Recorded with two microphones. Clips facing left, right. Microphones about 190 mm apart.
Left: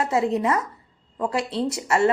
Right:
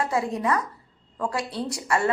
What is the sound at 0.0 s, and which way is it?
A woman's voice, 25° left (ahead or behind).